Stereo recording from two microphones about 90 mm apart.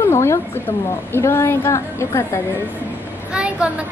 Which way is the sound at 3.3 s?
10° right (ahead or behind).